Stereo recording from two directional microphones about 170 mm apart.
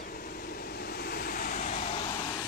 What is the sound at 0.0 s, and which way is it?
Waves, 60° left (ahead or behind).